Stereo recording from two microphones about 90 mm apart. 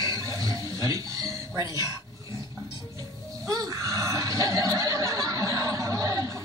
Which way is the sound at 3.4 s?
40° right (ahead or behind).